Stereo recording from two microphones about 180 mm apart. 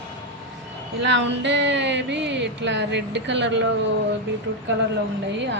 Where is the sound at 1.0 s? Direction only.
80° right.